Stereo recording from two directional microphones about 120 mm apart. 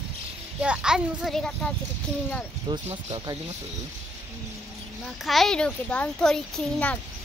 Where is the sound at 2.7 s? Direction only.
35° right (ahead or behind).